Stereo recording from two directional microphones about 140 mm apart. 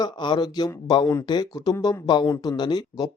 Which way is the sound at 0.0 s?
30° left (ahead or behind).